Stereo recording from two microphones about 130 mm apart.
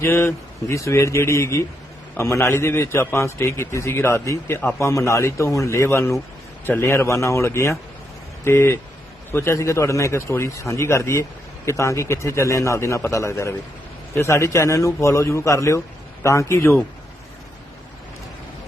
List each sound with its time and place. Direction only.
0.0 s a man's voice: 20° left (ahead or behind)